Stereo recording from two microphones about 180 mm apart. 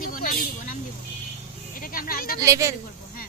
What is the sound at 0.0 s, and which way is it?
Vehicle, 50° left (ahead or behind).